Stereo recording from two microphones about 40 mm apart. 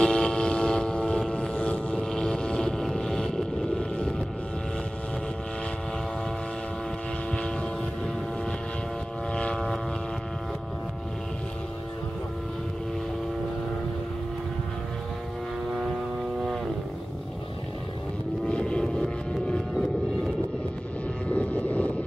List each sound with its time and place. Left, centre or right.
0.0 s vehicle: centre
1.5 s vehicle: left
2.1 s boat: centre
2.8 s boat: centre
3.3 s a sound: centre
9.3 s vehicle: left
18.5 s vehicle: left
21.3 s vehicle: left